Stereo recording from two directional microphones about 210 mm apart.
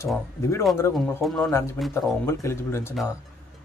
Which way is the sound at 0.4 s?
15° left (ahead or behind).